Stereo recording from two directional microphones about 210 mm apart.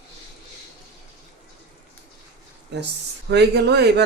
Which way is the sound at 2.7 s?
55° right (ahead or behind).